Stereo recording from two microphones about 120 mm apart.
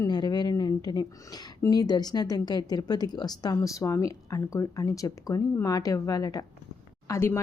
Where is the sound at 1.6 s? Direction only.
35° left (ahead or behind).